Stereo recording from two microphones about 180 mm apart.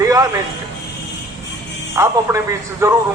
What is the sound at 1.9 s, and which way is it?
A man's voice, 15° right (ahead or behind).